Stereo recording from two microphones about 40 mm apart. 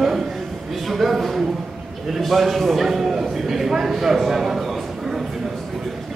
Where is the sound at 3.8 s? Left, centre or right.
Centre.